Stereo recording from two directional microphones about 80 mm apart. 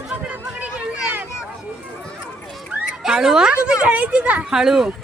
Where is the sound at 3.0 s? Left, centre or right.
Centre.